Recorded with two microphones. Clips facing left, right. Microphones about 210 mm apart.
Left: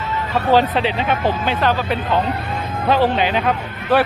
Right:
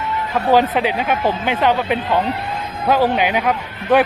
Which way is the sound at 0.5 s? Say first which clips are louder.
Right 1 dB; 10° right (ahead or behind).